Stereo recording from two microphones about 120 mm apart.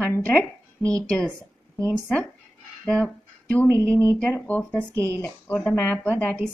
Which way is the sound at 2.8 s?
5° left (ahead or behind).